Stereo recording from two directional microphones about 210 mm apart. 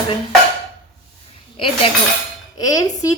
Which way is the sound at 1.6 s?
25° left (ahead or behind).